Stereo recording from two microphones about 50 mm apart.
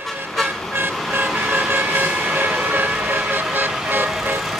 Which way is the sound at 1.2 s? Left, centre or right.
Right.